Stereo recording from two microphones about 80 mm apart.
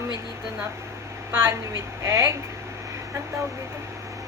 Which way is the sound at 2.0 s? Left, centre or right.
Right.